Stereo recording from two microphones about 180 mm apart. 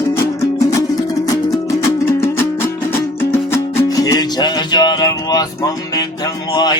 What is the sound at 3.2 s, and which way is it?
Music, 10° left (ahead or behind).